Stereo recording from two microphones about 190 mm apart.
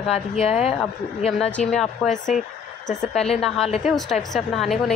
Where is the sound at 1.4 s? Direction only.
5° left (ahead or behind).